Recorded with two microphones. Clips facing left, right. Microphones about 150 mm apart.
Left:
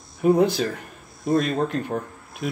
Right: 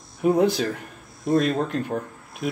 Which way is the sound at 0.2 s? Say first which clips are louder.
Left 1 dB; centre (ahead or behind).